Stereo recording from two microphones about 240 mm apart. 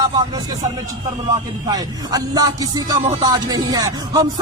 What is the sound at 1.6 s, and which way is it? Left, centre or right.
Speech, centre.